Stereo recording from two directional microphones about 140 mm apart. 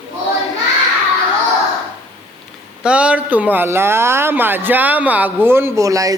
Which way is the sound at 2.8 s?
10° right (ahead or behind).